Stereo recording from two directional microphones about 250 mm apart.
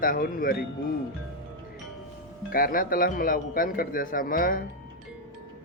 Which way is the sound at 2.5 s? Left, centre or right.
Left.